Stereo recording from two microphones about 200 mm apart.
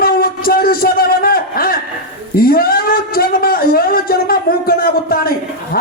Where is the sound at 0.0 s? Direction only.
50° left (ahead or behind).